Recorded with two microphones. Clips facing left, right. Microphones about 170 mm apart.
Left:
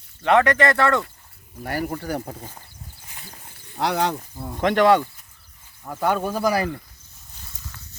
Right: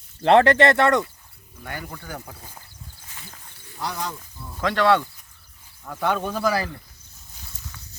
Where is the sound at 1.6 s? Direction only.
40° left (ahead or behind).